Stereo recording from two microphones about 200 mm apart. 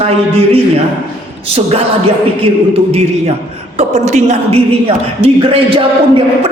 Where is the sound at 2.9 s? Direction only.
35° right (ahead or behind).